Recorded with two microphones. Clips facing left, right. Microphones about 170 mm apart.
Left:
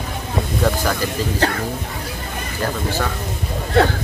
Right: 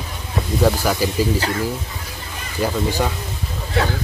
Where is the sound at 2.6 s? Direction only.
15° right (ahead or behind).